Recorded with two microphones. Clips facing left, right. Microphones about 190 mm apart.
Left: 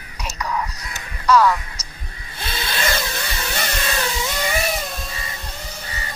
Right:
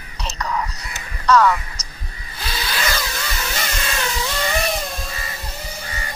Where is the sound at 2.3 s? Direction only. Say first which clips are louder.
Even; 25° left (ahead or behind).